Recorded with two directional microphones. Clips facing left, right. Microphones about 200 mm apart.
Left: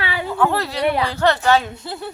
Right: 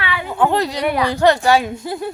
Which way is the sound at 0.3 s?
15° right (ahead or behind).